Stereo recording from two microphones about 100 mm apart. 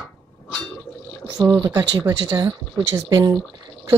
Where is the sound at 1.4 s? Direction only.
35° right (ahead or behind).